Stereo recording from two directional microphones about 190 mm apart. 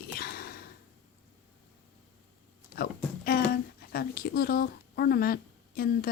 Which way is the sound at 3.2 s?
55° left (ahead or behind).